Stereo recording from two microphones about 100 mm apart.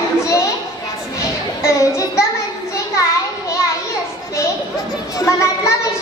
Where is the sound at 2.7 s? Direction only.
30° left (ahead or behind).